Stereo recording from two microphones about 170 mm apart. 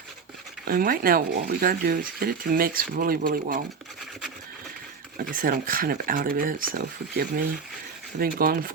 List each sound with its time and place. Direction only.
0.7 s speech: 60° right (ahead or behind)
5.1 s speech: 55° right (ahead or behind)